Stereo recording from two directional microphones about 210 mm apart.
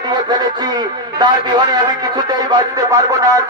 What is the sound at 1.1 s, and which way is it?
Music, 20° right (ahead or behind).